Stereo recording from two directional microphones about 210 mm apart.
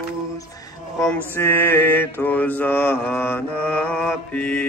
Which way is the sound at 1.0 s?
10° left (ahead or behind).